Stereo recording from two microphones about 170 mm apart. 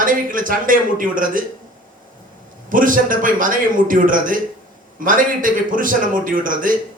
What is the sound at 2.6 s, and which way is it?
A man's voice, 50° right (ahead or behind).